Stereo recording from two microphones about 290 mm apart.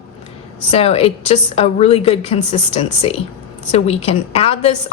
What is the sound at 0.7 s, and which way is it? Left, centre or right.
A woman's voice, left.